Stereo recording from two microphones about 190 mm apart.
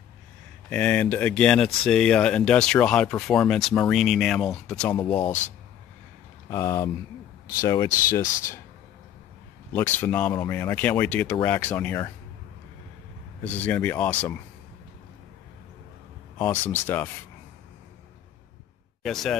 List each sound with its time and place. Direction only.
0.7 s speech: 5° left (ahead or behind)
4.9 s speech: 25° left (ahead or behind)
6.5 s speech: 15° left (ahead or behind)
9.7 s speech: 10° left (ahead or behind)
10.3 s speech: 20° left (ahead or behind)
10.6 s speech: 10° left (ahead or behind)
13.4 s speech: 10° left (ahead or behind)
16.3 s speech: 10° left (ahead or behind)
19.0 s speech: centre (ahead or behind)